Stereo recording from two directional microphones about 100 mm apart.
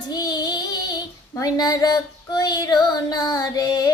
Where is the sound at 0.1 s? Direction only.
40° left (ahead or behind).